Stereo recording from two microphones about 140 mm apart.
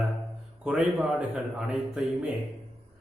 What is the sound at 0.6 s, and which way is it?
A man's voice, 5° right (ahead or behind).